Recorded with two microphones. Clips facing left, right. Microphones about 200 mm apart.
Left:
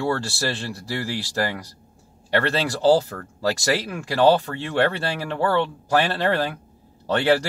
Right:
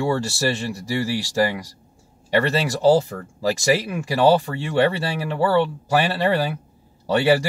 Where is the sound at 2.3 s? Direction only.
10° right (ahead or behind).